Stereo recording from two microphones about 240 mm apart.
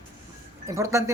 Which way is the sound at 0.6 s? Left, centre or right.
Centre.